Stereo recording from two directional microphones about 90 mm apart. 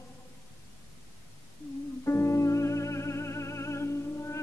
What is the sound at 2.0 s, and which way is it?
Music, 30° left (ahead or behind).